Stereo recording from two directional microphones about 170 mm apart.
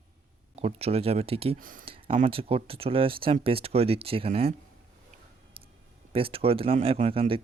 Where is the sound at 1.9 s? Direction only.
30° right (ahead or behind).